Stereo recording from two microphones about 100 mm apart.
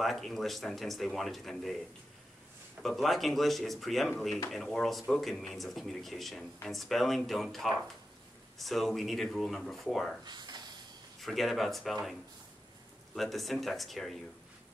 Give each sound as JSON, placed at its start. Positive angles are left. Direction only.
{"t": 0.0, "sound": "speech", "side_deg": 0}
{"t": 2.8, "sound": "speech", "side_deg": 0}
{"t": 10.2, "sound": "speech", "side_deg": -45}
{"t": 11.1, "sound": "speech", "side_deg": 0}